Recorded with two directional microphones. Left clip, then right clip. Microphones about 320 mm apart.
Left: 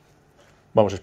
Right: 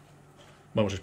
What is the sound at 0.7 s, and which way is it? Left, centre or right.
Speech, centre.